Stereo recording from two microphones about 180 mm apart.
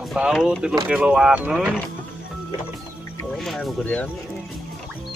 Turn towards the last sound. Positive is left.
turn(degrees=5)  # may be behind; listen again after turning